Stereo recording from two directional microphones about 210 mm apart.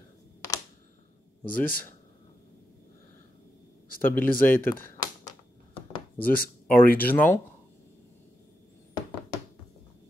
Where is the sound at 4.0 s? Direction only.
10° left (ahead or behind).